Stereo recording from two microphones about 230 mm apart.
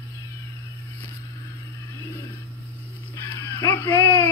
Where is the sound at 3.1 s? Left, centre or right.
Centre.